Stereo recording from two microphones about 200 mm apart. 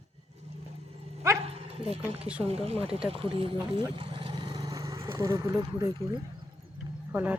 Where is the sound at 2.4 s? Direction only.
30° right (ahead or behind).